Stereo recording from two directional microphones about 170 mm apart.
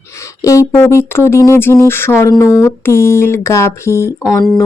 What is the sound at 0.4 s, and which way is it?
Speech, 15° left (ahead or behind).